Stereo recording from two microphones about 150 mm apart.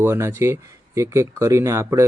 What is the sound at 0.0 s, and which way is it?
Speech, 15° right (ahead or behind).